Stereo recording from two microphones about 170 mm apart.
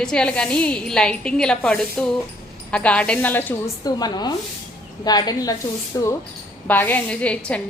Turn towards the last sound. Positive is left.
turn(degrees=5)  # may be behind; listen again after turning